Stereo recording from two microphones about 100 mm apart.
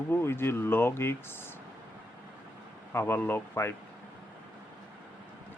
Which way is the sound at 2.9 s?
20° left (ahead or behind).